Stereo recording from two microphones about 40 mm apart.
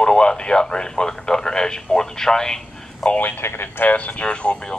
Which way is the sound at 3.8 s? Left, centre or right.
Left.